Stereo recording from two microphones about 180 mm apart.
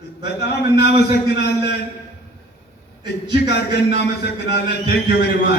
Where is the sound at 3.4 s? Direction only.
70° left (ahead or behind).